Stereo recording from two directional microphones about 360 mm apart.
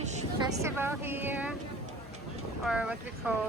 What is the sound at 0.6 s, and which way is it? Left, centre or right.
Speech, centre.